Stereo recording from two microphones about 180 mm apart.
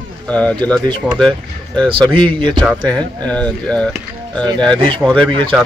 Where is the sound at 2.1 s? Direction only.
25° right (ahead or behind).